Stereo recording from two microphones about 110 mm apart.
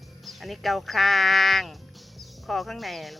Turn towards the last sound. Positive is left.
turn(degrees=0)  # may be behind; listen again after turning